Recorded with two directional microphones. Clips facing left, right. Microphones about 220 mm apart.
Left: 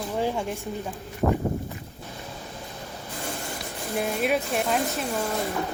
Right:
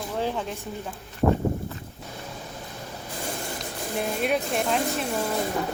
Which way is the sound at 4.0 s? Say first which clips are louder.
Left 1 dB; centre (ahead or behind).